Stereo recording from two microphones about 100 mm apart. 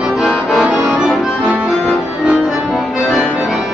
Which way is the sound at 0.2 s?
5° right (ahead or behind).